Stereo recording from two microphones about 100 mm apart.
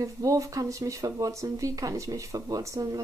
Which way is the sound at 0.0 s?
35° right (ahead or behind).